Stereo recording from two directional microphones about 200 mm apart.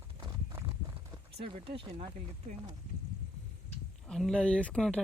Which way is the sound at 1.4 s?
25° right (ahead or behind).